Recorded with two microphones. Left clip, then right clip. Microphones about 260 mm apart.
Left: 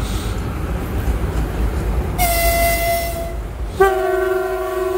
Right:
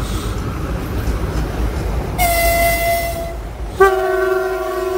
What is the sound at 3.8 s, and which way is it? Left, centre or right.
Train, centre.